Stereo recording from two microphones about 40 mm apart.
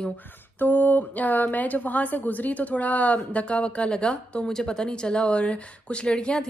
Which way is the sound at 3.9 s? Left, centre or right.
Left.